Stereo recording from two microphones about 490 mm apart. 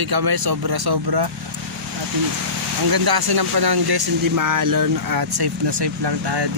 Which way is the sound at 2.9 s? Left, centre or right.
Right.